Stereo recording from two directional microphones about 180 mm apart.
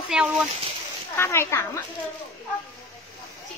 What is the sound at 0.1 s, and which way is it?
Speech, 5° right (ahead or behind).